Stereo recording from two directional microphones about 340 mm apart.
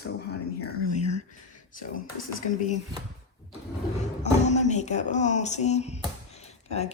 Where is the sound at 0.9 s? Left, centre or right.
Centre.